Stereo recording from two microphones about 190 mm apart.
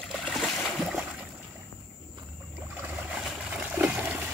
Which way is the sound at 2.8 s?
5° right (ahead or behind).